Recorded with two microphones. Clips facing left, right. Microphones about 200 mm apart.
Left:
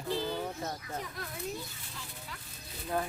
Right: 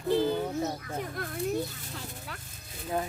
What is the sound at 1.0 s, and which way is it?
Speech, 55° right (ahead or behind).